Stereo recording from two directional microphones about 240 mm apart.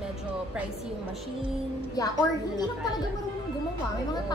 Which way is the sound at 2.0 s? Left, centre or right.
Centre.